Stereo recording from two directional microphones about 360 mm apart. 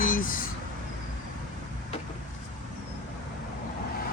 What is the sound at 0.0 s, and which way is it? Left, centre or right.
Vehicle, left.